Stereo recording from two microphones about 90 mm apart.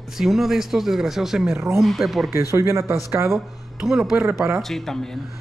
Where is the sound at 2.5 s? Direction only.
30° right (ahead or behind).